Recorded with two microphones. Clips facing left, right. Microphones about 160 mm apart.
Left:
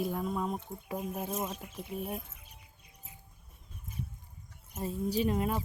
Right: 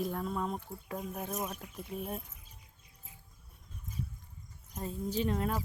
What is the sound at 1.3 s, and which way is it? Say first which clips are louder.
Speech: even; 20° left (ahead or behind).